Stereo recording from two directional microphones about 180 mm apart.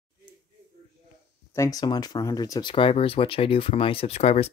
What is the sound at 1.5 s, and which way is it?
Speech, 20° left (ahead or behind).